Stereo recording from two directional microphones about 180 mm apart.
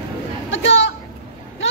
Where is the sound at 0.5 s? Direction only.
90° left.